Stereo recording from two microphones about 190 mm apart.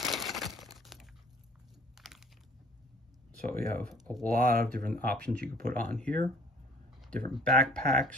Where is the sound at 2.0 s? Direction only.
Centre (ahead or behind).